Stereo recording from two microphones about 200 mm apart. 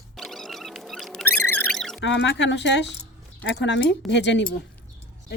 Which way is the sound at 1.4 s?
5° left (ahead or behind).